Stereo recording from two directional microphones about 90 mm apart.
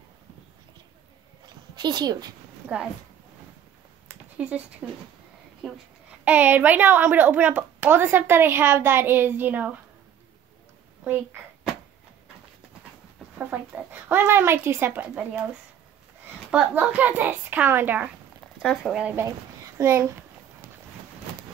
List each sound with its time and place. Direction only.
1.8 s speech: 55° right (ahead or behind)
4.4 s speech: 10° right (ahead or behind)
5.6 s speech: centre (ahead or behind)
6.2 s a woman's voice: 20° right (ahead or behind)
13.4 s a woman's voice: 20° right (ahead or behind)
16.4 s speech: 15° right (ahead or behind)
18.6 s speech: centre (ahead or behind)
19.8 s a child's voice: 30° right (ahead or behind)